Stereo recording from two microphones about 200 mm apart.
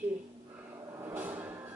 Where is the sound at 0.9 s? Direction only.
10° right (ahead or behind).